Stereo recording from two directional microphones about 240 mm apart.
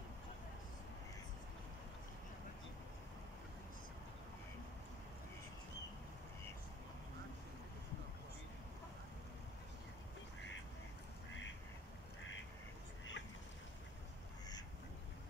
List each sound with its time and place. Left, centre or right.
13.2 s duck: left